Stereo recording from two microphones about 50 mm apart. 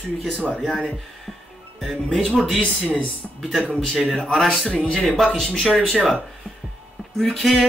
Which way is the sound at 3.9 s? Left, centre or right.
Centre.